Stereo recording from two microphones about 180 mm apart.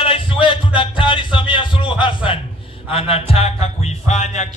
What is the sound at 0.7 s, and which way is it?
Music, 30° left (ahead or behind).